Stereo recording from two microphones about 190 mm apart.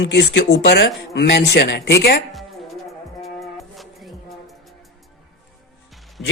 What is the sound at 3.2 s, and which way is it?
Music, centre (ahead or behind).